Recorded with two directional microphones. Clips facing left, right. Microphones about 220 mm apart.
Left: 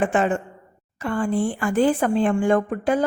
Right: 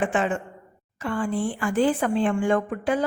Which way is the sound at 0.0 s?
45° left (ahead or behind).